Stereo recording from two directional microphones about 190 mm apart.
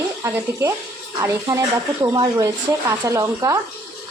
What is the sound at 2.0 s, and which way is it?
Speech, 20° right (ahead or behind).